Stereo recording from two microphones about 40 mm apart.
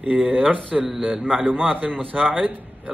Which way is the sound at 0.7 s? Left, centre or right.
Centre.